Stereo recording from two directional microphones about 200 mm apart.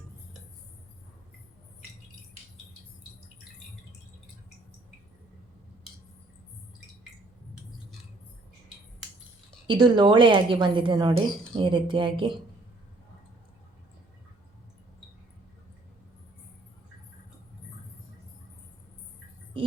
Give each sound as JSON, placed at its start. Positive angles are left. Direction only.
{"t": 9.6, "sound": "a woman's voice", "side_deg": -20}